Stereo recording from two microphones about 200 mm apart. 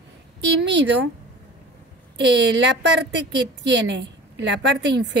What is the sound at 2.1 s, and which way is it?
A woman's voice, 60° right (ahead or behind).